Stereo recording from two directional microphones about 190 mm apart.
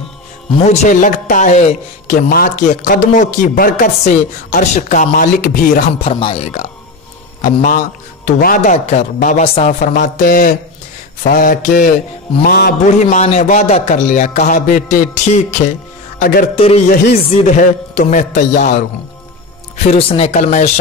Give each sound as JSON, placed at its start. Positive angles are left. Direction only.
{"t": 0.6, "sound": "a woman's voice", "side_deg": 40}
{"t": 6.0, "sound": "speech", "side_deg": 30}
{"t": 7.4, "sound": "a woman's voice", "side_deg": 45}
{"t": 12.8, "sound": "speech", "side_deg": 40}